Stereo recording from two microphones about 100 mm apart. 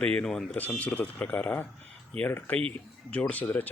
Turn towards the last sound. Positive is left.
turn(degrees=15)  # may be behind; listen again after turning